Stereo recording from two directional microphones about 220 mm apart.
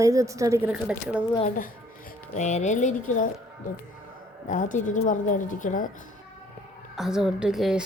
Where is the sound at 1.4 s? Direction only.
40° left (ahead or behind).